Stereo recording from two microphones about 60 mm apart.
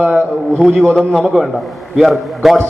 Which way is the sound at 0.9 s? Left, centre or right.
Centre.